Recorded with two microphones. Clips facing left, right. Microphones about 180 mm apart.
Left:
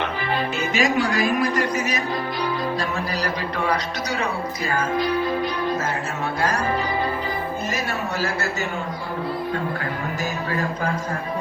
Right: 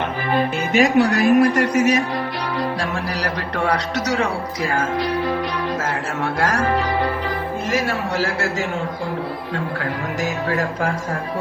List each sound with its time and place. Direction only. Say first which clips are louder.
0.3 s speech: right 7 dB; 60° right (ahead or behind); by 2.0 s 75° right (ahead or behind)
3.2 s speech: right 2 dB; 70° right (ahead or behind)
6.5 s a man's voice: right 3 dB; 90° right
10.5 s speech: right 2 dB; 75° right (ahead or behind)